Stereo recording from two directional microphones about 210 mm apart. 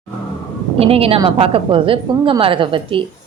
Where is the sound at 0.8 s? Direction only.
30° right (ahead or behind).